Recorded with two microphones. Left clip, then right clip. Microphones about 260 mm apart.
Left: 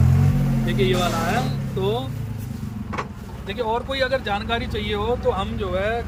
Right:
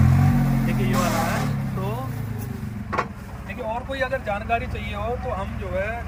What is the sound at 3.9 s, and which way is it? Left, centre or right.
Speech, centre.